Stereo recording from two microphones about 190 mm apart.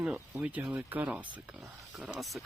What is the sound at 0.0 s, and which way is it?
Speech, 5° right (ahead or behind).